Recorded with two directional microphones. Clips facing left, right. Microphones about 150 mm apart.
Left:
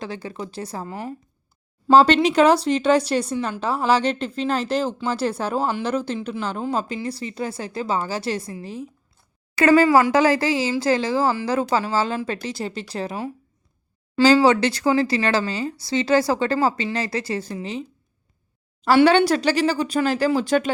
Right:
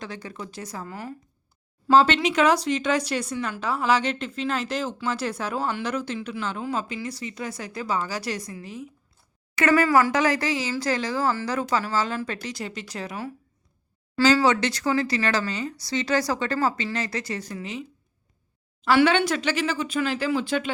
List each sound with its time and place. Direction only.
0.0 s speech: 30° left (ahead or behind)
14.4 s speech: 30° left (ahead or behind)
18.9 s speech: 35° left (ahead or behind)